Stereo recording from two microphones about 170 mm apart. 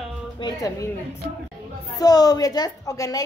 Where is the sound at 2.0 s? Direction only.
20° left (ahead or behind).